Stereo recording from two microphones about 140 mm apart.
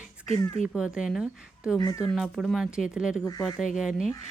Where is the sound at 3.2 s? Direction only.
25° left (ahead or behind).